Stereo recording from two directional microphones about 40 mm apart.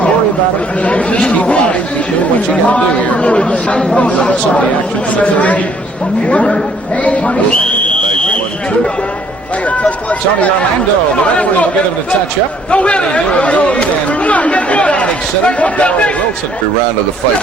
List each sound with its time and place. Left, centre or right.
0.9 s a man's voice: left
3.8 s speech: left
4.0 s speech: left
5.1 s a man's voice: left
6.2 s speech: left
7.0 s a sound: left
11.1 s speech: left
12.7 s a man's voice: left